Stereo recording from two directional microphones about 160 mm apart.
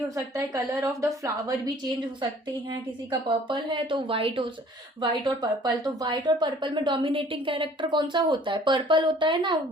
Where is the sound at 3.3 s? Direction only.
30° right (ahead or behind).